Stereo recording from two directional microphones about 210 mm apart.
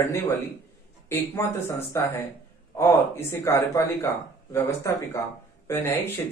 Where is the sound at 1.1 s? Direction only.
10° left (ahead or behind).